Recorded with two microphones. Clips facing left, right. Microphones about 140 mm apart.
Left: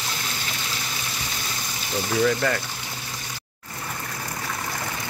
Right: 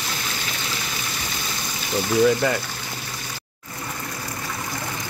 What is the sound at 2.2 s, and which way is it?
Speech, 15° right (ahead or behind).